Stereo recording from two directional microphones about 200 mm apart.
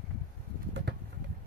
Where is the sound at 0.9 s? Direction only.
55° right (ahead or behind).